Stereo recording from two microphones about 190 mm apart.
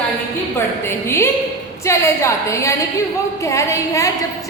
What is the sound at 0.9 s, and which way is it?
A woman's voice, 15° left (ahead or behind).